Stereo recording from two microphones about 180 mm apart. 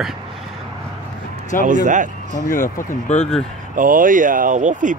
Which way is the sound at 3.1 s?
35° left (ahead or behind).